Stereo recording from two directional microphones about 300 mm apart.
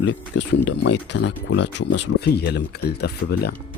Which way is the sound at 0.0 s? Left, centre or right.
Left.